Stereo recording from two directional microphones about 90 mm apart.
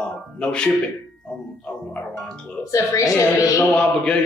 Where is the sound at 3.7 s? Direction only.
10° left (ahead or behind).